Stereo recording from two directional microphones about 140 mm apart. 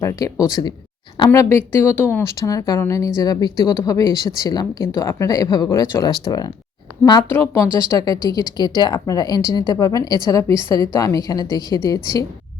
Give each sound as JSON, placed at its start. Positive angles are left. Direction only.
{"t": 0.0, "sound": "speech", "side_deg": 25}
{"t": 7.3, "sound": "speech", "side_deg": 15}
{"t": 10.5, "sound": "a woman's voice", "side_deg": -35}
{"t": 10.9, "sound": "speech", "side_deg": 25}